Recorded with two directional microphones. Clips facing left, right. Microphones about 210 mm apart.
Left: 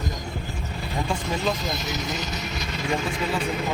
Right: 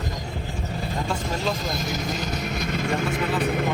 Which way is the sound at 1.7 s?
50° right (ahead or behind).